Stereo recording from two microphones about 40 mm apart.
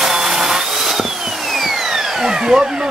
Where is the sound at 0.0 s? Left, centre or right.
Centre.